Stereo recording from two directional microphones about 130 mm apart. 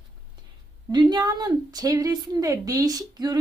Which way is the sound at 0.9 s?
35° right (ahead or behind).